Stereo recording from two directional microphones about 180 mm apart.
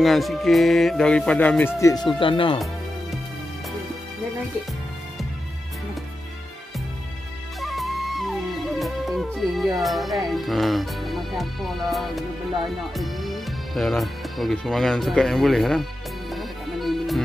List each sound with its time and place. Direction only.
0.0 s speech: centre (ahead or behind)
1.8 s speech: 20° left (ahead or behind)
7.6 s music: centre (ahead or behind)
9.8 s speech: centre (ahead or behind)
16.3 s music: centre (ahead or behind)